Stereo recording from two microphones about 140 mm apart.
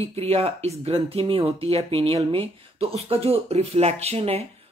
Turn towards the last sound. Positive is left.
turn(degrees=-45)  # may be behind; listen again after turning